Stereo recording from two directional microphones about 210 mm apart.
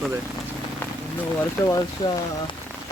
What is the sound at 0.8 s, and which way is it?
Rain on surface, 10° left (ahead or behind).